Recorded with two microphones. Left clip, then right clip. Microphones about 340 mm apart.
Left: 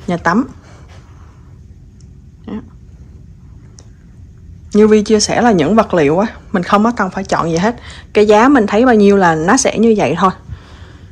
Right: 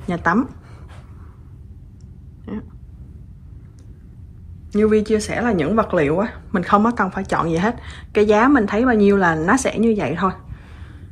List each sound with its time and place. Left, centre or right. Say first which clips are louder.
0.0 s speech: left 4 dB; centre
2.5 s speech: left 4 dB; centre
4.6 s speech: left 7 dB; centre